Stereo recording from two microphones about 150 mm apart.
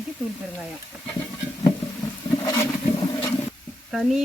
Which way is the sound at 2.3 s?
25° left (ahead or behind).